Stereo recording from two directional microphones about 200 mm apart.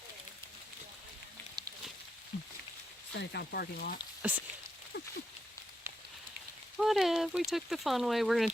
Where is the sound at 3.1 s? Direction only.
55° left (ahead or behind).